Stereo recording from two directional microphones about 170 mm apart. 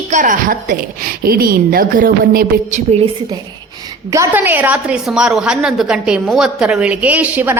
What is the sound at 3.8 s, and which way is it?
A woman's voice, 20° right (ahead or behind).